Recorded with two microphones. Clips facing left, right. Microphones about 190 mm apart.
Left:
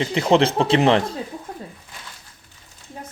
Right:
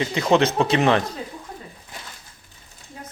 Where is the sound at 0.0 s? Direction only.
30° left (ahead or behind).